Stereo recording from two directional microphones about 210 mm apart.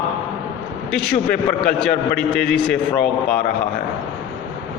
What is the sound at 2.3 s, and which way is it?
Speech, 5° left (ahead or behind).